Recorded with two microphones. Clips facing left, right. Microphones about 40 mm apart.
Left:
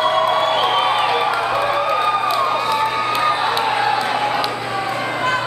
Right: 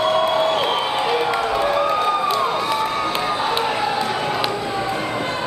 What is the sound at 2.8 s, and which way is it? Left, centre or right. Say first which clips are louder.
Crowd: left 3 dB; left.